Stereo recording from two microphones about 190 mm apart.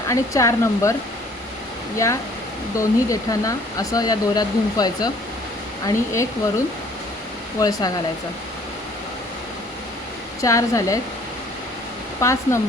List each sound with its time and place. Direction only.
0.1 s speech: 15° left (ahead or behind)
2.7 s speech: 15° left (ahead or behind)
7.6 s speech: 20° left (ahead or behind)
10.4 s speech: 15° left (ahead or behind)
12.2 s speech: 15° left (ahead or behind)